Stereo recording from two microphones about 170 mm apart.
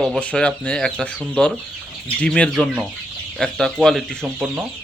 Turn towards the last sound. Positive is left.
turn(degrees=-5)  # may be behind; listen again after turning